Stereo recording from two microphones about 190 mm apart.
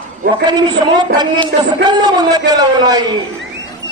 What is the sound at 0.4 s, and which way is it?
A woman's voice, 20° right (ahead or behind).